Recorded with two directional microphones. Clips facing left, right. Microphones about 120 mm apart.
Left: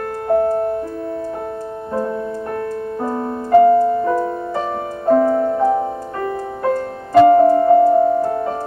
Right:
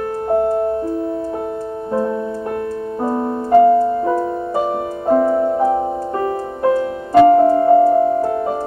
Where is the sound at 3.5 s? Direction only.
20° right (ahead or behind).